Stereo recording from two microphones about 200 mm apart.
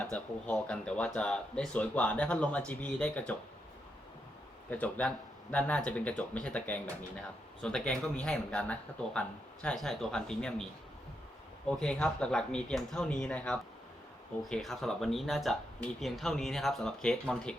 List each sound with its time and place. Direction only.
0.0 s speech: 5° left (ahead or behind)
4.7 s speech: 5° left (ahead or behind)